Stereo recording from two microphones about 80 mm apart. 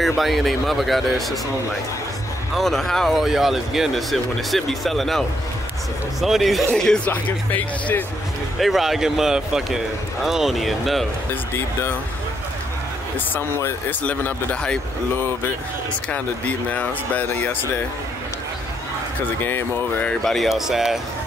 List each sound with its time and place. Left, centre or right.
0.0 s speech: centre
2.5 s speech: centre
6.2 s speech: centre
7.1 s speech: left
8.5 s speech: centre
13.8 s speech: centre
16.1 s speech: centre
19.4 s speech: left
20.2 s speech: centre